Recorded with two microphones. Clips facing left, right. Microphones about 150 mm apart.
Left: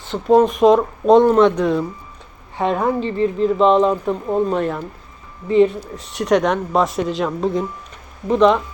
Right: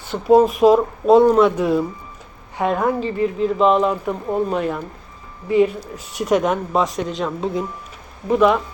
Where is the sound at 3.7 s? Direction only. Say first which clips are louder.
Left 3 dB; 25° left (ahead or behind).